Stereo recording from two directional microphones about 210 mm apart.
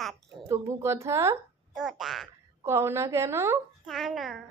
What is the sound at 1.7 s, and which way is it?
Speech, centre (ahead or behind).